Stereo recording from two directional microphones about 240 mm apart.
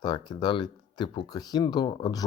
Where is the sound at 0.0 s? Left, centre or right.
Centre.